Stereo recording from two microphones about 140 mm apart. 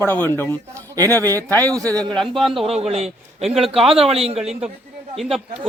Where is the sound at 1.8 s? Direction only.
25° right (ahead or behind).